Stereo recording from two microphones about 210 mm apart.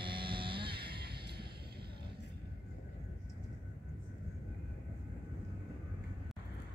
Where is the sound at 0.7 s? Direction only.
50° right (ahead or behind).